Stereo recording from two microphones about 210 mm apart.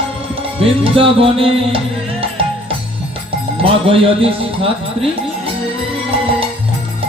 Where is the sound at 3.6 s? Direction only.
25° right (ahead or behind).